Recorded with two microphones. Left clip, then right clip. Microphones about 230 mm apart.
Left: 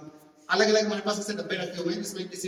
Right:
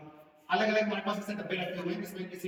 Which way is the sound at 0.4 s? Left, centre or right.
Centre.